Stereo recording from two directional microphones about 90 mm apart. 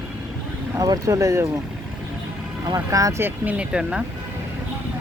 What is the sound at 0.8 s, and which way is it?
Speech, 40° right (ahead or behind).